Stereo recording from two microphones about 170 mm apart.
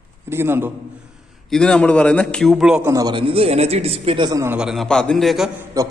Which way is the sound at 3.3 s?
35° right (ahead or behind).